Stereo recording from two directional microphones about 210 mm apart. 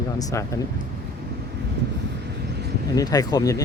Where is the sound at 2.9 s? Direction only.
20° left (ahead or behind).